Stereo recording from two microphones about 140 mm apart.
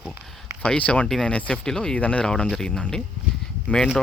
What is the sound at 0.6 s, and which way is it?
Speech, 10° left (ahead or behind).